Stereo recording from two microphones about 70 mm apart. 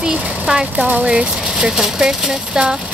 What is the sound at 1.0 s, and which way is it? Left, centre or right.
Speech, centre.